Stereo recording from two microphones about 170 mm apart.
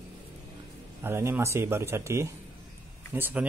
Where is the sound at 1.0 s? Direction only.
15° right (ahead or behind).